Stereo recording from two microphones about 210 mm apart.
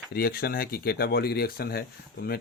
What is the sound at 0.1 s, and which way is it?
Speech, 45° left (ahead or behind).